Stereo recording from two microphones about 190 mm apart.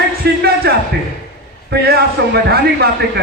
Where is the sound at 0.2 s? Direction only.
60° right (ahead or behind).